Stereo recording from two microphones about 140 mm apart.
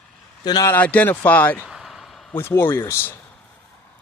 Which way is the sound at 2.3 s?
15° left (ahead or behind).